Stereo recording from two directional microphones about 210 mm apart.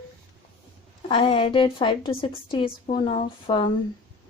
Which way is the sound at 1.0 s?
25° left (ahead or behind).